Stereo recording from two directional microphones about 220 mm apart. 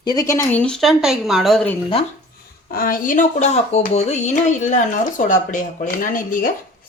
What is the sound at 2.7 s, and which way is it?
Speech, 40° left (ahead or behind).